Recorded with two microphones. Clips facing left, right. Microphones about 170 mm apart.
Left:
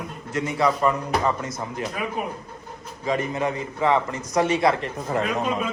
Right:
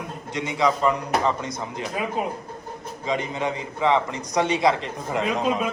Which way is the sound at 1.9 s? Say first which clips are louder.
Right 4 dB; 20° right (ahead or behind).